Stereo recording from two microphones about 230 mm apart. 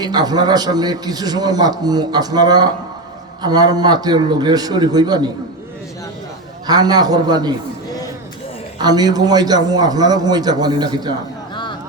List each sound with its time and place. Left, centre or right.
0.0 s a man's voice: centre
6.7 s a man's voice: centre
8.8 s a man's voice: centre
11.5 s a sound: centre